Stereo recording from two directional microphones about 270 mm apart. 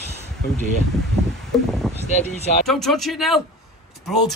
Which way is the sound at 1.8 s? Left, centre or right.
Centre.